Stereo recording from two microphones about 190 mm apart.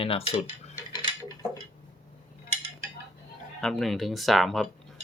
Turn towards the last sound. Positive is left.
turn(degrees=0)  # may be behind; listen again after turning